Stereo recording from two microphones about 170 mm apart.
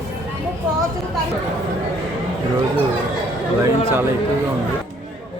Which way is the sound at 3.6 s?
15° right (ahead or behind).